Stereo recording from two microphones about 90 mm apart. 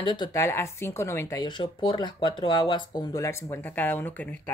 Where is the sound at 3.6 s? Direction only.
20° left (ahead or behind).